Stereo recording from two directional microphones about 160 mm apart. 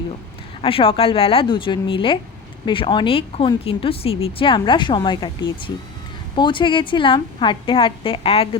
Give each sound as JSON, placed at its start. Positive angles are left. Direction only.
{"t": 0.6, "sound": "speech", "side_deg": 35}